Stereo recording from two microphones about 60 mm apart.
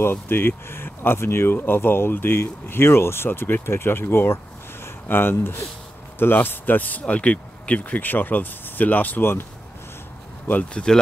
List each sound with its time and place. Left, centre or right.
0.0 s speech: left
10.6 s speech: centre